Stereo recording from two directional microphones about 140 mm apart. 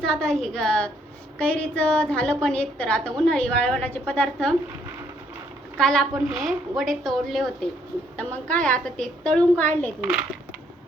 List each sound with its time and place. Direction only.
0.0 s a woman's voice: 5° left (ahead or behind)
5.7 s a woman's voice: 5° left (ahead or behind)